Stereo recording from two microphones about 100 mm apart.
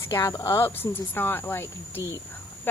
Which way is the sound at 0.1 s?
40° left (ahead or behind).